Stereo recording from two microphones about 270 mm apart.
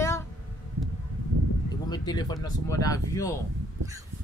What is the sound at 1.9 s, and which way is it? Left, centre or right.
Speech, centre.